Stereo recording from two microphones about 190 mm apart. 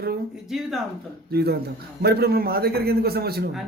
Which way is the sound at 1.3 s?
55° right (ahead or behind).